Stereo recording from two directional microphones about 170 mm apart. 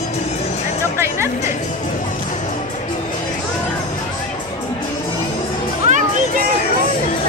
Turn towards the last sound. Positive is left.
turn(degrees=-45)  # may be behind; listen again after turning